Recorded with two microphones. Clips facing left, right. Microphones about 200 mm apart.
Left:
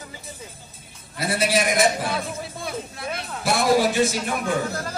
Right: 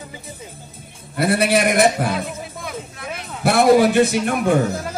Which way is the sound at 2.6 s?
30° left (ahead or behind).